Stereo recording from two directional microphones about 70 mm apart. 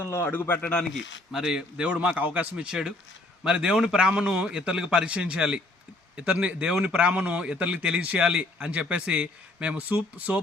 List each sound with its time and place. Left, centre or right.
0.0 s a man's voice: left
0.6 s speech: centre
0.9 s a man's voice: centre; by 10.4 s right